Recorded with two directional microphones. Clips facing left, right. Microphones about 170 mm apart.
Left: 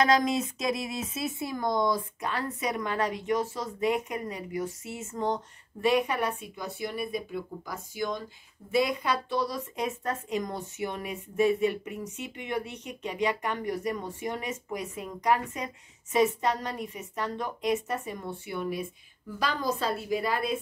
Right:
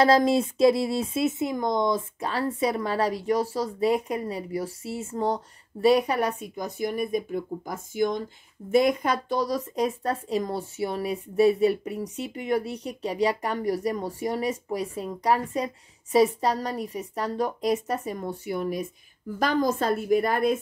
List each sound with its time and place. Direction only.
0.0 s a woman's voice: 30° right (ahead or behind); by 20.5 s 50° right (ahead or behind)